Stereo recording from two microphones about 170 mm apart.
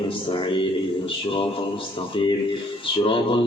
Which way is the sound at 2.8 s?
30° left (ahead or behind).